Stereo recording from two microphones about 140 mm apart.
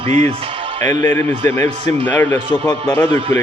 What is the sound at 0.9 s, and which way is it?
A man's voice, 20° left (ahead or behind).